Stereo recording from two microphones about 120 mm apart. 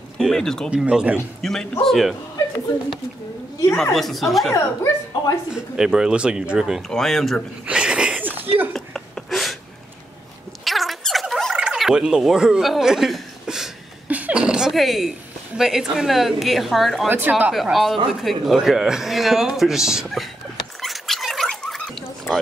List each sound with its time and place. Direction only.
0.2 s a man's voice: 5° left (ahead or behind)
0.7 s speech: 10° right (ahead or behind)
1.4 s a man's voice: 5° left (ahead or behind)
3.9 s a man's voice: centre (ahead or behind)
4.6 s speech: 25° left (ahead or behind)
5.5 s a man's voice: 5° right (ahead or behind)
7.6 s a sound: 10° right (ahead or behind)
8.7 s a sound: 5° left (ahead or behind)
10.6 s a sound: centre (ahead or behind)
14.0 s a woman's voice: 10° right (ahead or behind)
17.1 s speech: 15° right (ahead or behind)
17.6 s a man's voice: centre (ahead or behind)
20.8 s a sound: centre (ahead or behind)
22.3 s speech: 20° left (ahead or behind)